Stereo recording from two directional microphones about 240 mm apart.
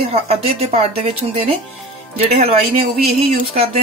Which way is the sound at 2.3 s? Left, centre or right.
Right.